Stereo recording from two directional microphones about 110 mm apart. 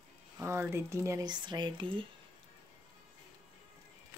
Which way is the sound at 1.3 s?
40° right (ahead or behind).